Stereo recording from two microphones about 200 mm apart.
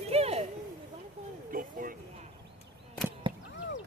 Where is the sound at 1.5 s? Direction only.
45° right (ahead or behind).